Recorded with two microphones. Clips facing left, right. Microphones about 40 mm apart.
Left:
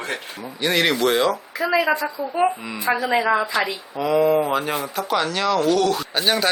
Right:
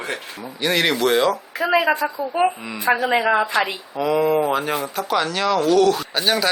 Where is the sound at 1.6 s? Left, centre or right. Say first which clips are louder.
Right 2 dB; right.